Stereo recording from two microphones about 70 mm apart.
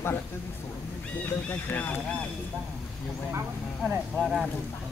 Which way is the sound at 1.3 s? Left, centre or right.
Left.